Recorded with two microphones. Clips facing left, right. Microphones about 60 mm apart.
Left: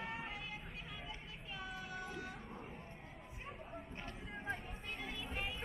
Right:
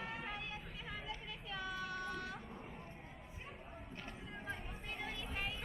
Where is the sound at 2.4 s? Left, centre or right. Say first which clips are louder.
Even; centre.